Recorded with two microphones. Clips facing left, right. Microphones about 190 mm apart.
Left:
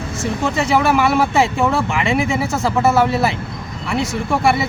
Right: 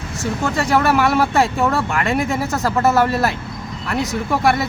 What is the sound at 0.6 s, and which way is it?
Speech, centre (ahead or behind).